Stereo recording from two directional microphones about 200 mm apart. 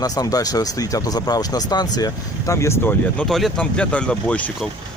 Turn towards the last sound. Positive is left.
turn(degrees=5)  # may be behind; listen again after turning